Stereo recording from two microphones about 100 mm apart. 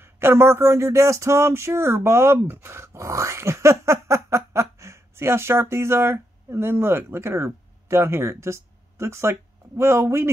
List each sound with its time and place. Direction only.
0.0 s speech: 25° right (ahead or behind)